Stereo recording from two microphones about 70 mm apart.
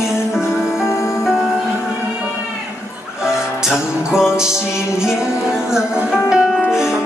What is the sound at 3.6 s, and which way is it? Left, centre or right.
Music, centre.